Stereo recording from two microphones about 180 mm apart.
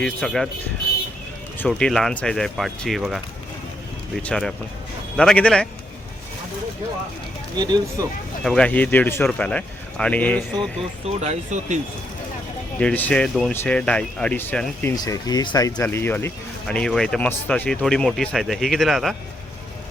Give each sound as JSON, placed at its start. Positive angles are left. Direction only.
{"t": 0.0, "sound": "speech", "side_deg": 5}
{"t": 1.5, "sound": "speech", "side_deg": 5}
{"t": 7.5, "sound": "speech", "side_deg": -25}
{"t": 8.4, "sound": "speech", "side_deg": 5}
{"t": 11.0, "sound": "speech", "side_deg": -35}
{"t": 12.8, "sound": "speech", "side_deg": 10}